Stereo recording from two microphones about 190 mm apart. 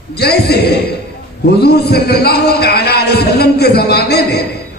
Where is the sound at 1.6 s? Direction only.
55° left (ahead or behind).